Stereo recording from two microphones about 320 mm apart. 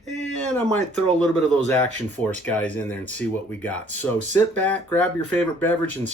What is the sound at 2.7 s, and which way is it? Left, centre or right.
Speech, centre.